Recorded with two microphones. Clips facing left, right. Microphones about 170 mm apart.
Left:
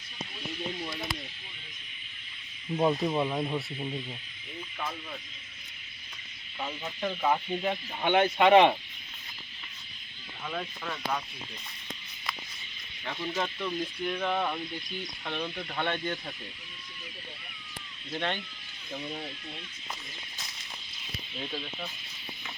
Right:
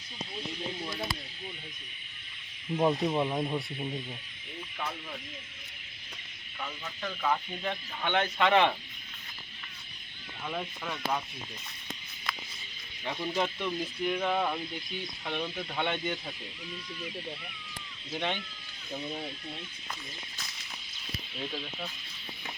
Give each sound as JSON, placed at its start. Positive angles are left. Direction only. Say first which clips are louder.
{"t": 2.7, "sound": "speech", "louder": "even", "side_deg": -5}
{"t": 6.6, "sound": "speech", "louder": "left 5 dB", "side_deg": 20}
{"t": 10.4, "sound": "speech", "louder": "even", "side_deg": -10}
{"t": 13.1, "sound": "speech", "louder": "right 2 dB", "side_deg": -10}
{"t": 18.1, "sound": "speech", "louder": "left 1 dB", "side_deg": -5}
{"t": 21.3, "sound": "speech", "louder": "left 1 dB", "side_deg": 0}